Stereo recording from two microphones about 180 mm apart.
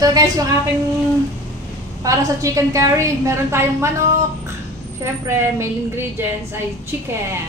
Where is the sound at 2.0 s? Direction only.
20° right (ahead or behind).